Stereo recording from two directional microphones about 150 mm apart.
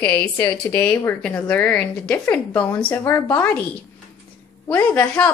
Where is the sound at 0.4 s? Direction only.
15° left (ahead or behind).